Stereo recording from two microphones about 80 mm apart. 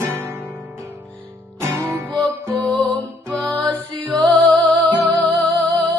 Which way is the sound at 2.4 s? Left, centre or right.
Right.